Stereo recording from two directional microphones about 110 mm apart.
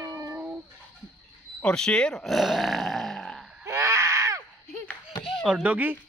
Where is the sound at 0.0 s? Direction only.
25° right (ahead or behind).